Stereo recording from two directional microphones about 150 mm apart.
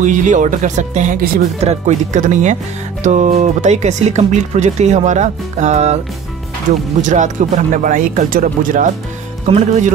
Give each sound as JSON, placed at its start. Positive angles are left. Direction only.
{"t": 0.0, "sound": "speech", "side_deg": -55}
{"t": 7.0, "sound": "speech", "side_deg": -55}
{"t": 9.5, "sound": "speech", "side_deg": -50}